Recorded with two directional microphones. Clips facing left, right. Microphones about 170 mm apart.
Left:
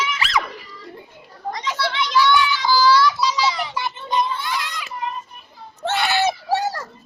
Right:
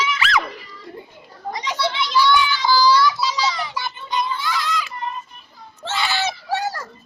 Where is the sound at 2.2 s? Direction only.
Centre (ahead or behind).